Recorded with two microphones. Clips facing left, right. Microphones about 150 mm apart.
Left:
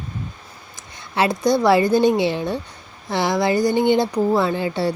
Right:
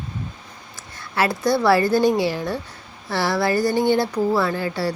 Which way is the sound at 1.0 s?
20° left (ahead or behind).